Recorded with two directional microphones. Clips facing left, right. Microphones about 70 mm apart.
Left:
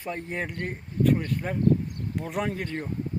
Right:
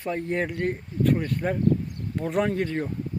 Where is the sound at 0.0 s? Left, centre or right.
Centre.